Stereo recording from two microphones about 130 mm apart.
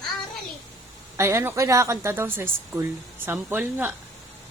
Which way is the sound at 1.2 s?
20° right (ahead or behind).